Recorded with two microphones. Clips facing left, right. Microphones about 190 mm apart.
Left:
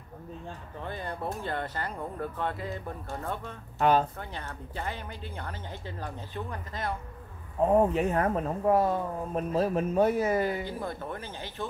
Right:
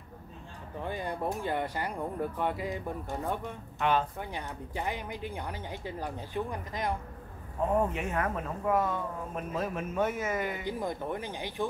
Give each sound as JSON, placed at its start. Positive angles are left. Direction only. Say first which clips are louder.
{"t": 0.7, "sound": "speech", "louder": "right 3 dB", "side_deg": -15}
{"t": 3.7, "sound": "speech", "louder": "left 4 dB", "side_deg": 40}
{"t": 4.2, "sound": "speech", "louder": "right 2 dB", "side_deg": -15}
{"t": 7.7, "sound": "speech", "louder": "left 6 dB", "side_deg": 35}
{"t": 10.6, "sound": "speech", "louder": "right 1 dB", "side_deg": -15}